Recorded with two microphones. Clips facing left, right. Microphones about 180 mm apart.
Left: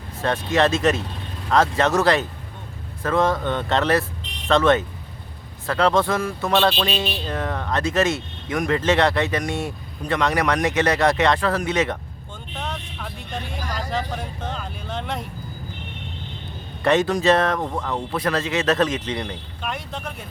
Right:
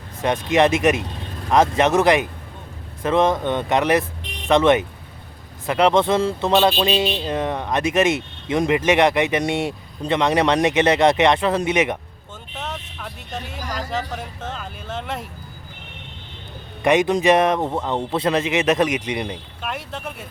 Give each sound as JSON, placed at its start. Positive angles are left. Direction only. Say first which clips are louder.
{"t": 0.2, "sound": "speech", "louder": "right 2 dB", "side_deg": -15}
{"t": 12.5, "sound": "vehicle", "louder": "even", "side_deg": -5}
{"t": 13.0, "sound": "speech", "louder": "even", "side_deg": 0}
{"t": 16.8, "sound": "speech", "louder": "right 2 dB", "side_deg": -15}
{"t": 19.6, "sound": "speech", "louder": "right 1 dB", "side_deg": -5}